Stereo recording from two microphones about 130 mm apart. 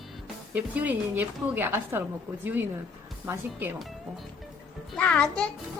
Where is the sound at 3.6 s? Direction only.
15° right (ahead or behind).